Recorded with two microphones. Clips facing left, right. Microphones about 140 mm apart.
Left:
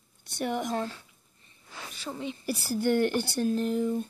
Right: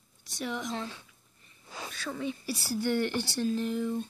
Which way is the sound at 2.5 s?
50° left (ahead or behind).